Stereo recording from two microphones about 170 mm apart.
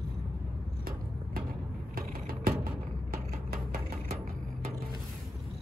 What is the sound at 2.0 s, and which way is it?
Vehicle, 60° right (ahead or behind).